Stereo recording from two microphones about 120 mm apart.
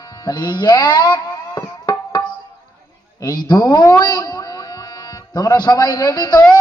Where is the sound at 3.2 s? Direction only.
35° left (ahead or behind).